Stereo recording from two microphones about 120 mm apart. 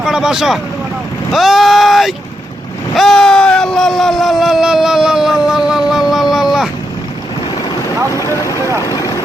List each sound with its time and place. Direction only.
0.0 s speech: 5° right (ahead or behind)
2.9 s a sound: centre (ahead or behind)
8.8 s vehicle: 30° left (ahead or behind)